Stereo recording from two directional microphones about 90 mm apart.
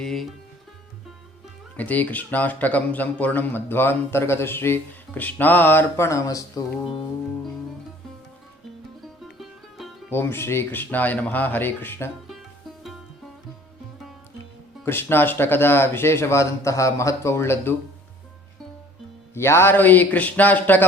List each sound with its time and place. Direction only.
0.0 s speech: 5° left (ahead or behind)
1.7 s speech: 15° left (ahead or behind)
6.1 s speech: 35° left (ahead or behind)
9.2 s music: centre (ahead or behind)
10.1 s speech: 25° left (ahead or behind)
14.8 s speech: 25° left (ahead or behind)
19.3 s speech: 30° left (ahead or behind)